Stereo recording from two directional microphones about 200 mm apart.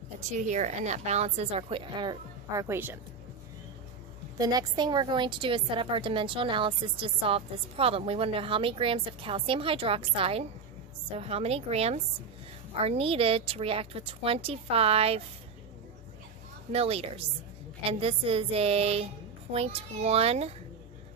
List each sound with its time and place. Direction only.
0.2 s a woman's voice: 35° right (ahead or behind); by 3.0 s 10° right (ahead or behind)
4.4 s a woman's voice: 20° right (ahead or behind)
16.7 s a woman's voice: 30° right (ahead or behind)